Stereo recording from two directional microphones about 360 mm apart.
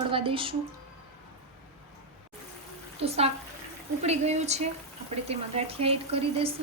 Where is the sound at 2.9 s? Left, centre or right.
Centre.